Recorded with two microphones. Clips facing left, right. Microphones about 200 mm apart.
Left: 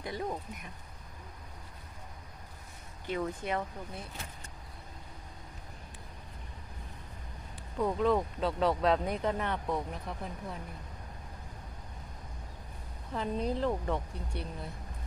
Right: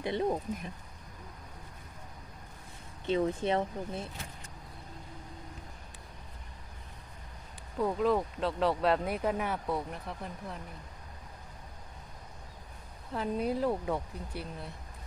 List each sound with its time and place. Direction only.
0.0 s speech: 25° right (ahead or behind)
3.1 s speech: 25° right (ahead or behind)
7.8 s speech: centre (ahead or behind)
13.1 s speech: 5° right (ahead or behind)